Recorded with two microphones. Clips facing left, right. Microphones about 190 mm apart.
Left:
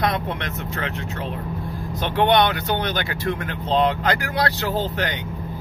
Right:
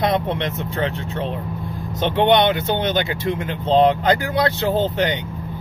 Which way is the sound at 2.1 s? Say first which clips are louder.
Right 2 dB; 20° right (ahead or behind).